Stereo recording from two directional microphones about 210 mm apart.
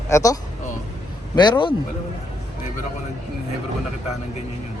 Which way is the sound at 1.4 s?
20° left (ahead or behind).